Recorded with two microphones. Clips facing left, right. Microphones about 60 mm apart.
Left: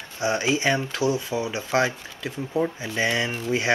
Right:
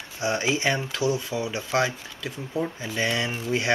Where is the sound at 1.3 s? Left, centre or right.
Centre.